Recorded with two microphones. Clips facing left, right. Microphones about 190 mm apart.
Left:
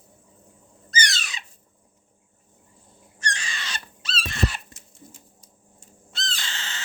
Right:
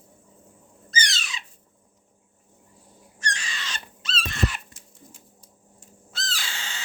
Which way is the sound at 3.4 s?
35° left (ahead or behind).